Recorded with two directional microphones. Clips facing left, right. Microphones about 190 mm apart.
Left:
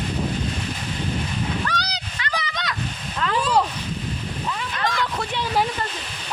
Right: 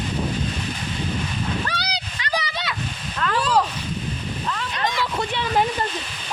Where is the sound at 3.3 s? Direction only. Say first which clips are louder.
Even; 15° left (ahead or behind).